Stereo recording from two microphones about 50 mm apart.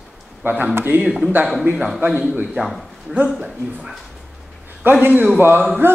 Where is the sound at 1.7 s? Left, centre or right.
Centre.